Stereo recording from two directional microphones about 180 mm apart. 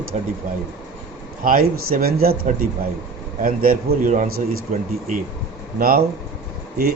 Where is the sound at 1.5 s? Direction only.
55° right (ahead or behind).